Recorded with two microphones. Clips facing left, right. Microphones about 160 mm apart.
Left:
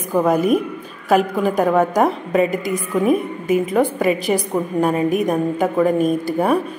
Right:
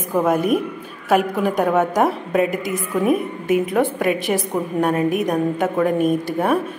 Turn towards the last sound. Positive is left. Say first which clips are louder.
# left 1 dB
turn(degrees=0)  # may be behind; listen again after turning